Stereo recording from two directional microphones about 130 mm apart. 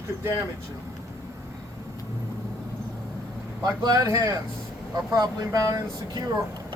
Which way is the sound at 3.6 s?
30° right (ahead or behind).